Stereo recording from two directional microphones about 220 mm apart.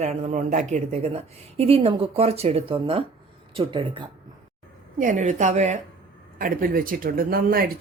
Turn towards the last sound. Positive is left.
turn(degrees=-40)  # may be behind; listen again after turning